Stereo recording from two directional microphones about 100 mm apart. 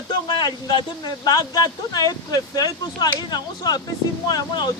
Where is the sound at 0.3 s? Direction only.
50° left (ahead or behind).